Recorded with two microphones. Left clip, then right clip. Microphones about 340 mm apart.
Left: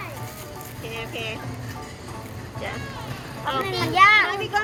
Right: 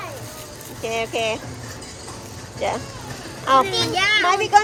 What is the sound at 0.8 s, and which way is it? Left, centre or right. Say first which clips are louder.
Speech: right 9 dB; centre.